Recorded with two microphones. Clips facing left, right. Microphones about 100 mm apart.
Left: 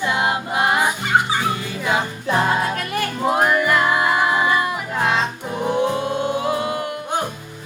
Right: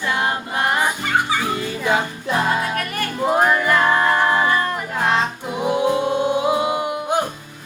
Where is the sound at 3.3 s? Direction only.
5° left (ahead or behind).